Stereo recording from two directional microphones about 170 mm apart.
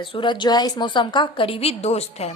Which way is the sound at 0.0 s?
30° left (ahead or behind).